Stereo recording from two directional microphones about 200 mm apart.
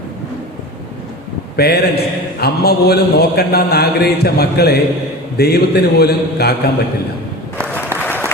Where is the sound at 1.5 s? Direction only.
50° left (ahead or behind).